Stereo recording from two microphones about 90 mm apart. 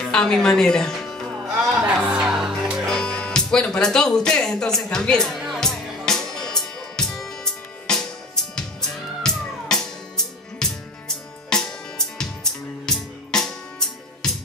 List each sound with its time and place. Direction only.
0.0 s a woman's voice: 5° left (ahead or behind)
1.5 s speech: 10° right (ahead or behind)
2.1 s music: 5° right (ahead or behind)
2.9 s speech: 10° left (ahead or behind)
5.6 s music: 5° left (ahead or behind)